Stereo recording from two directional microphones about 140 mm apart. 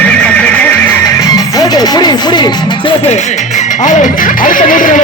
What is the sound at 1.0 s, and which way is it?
Music, 25° left (ahead or behind).